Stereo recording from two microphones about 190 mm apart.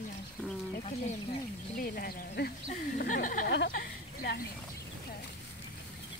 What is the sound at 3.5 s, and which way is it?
Speech, 60° left (ahead or behind).